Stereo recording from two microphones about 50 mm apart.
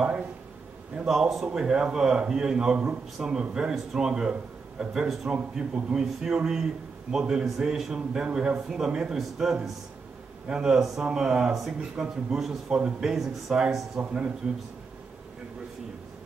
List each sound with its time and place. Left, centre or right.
1.0 s speech: centre
12.6 s a man's voice: right
13.0 s speech: centre